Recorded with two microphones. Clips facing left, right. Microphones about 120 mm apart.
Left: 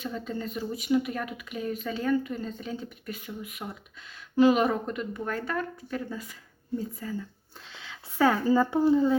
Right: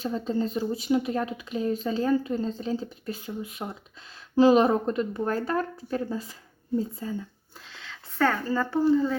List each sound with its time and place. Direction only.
0.0 s a woman's voice: 30° right (ahead or behind)
7.7 s speech: 5° left (ahead or behind)